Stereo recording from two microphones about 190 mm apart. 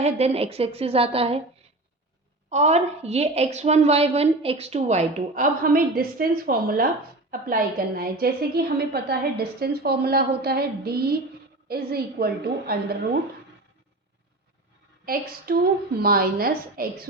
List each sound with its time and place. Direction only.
0.0 s a woman's voice: 30° right (ahead or behind)
2.5 s a woman's voice: 35° right (ahead or behind); by 13.0 s 55° right (ahead or behind)
15.0 s a woman's voice: 50° right (ahead or behind)